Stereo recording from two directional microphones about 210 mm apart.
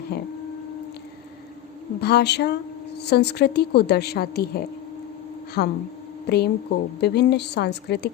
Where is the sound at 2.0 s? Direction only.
50° left (ahead or behind).